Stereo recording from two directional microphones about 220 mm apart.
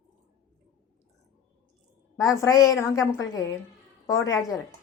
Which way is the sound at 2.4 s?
15° left (ahead or behind).